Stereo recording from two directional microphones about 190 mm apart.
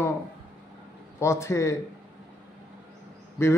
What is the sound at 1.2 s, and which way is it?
Speech, 15° left (ahead or behind).